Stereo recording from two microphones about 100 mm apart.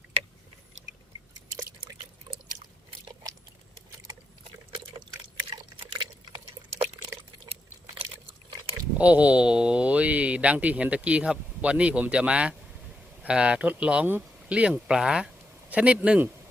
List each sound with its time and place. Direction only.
5.5 s drip: 60° right (ahead or behind)
9.0 s speech: 15° right (ahead or behind)